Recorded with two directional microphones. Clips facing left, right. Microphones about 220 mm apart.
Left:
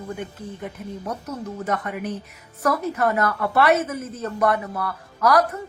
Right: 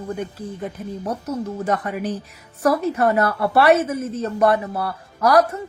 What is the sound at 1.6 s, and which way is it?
Speech, 30° right (ahead or behind).